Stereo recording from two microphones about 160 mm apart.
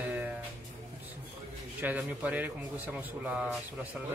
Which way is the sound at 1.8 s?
10° right (ahead or behind).